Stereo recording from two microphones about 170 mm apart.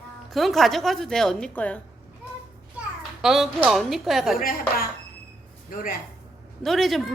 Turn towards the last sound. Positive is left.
turn(degrees=0)  # may be behind; listen again after turning